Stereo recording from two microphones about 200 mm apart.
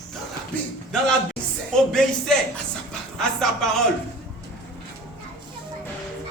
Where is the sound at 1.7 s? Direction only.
5° left (ahead or behind).